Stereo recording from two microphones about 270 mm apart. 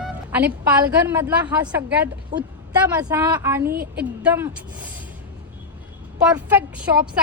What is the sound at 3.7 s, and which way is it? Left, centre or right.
Speech, right.